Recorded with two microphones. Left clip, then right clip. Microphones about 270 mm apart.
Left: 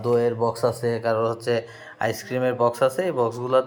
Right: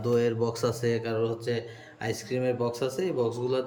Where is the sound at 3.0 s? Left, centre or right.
Left.